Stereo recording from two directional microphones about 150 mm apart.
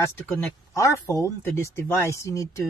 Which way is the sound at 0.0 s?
20° left (ahead or behind).